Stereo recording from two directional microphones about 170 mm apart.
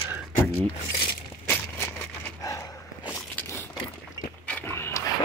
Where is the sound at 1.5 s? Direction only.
15° left (ahead or behind).